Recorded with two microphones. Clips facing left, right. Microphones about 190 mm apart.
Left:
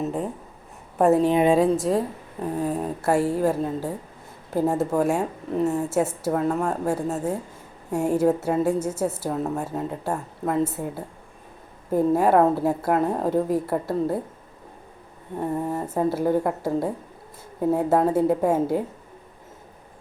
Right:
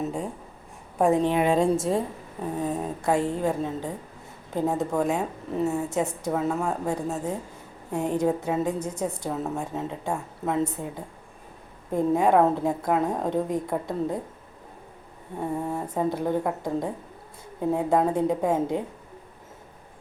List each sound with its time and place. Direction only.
0.0 s a woman's voice: 5° left (ahead or behind)
1.3 s a woman's voice: 20° left (ahead or behind)
1.5 s a woman's voice: centre (ahead or behind)
6.8 s a woman's voice: 10° left (ahead or behind)
15.4 s a woman's voice: 5° left (ahead or behind)